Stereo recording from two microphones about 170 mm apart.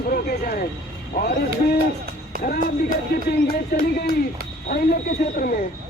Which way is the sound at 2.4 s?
60° left (ahead or behind).